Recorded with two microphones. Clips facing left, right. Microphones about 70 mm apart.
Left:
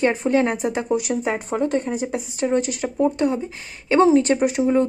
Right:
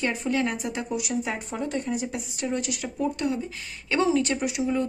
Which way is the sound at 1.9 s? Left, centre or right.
Left.